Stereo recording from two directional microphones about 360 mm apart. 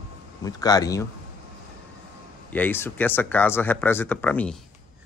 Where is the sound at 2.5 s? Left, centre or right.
Centre.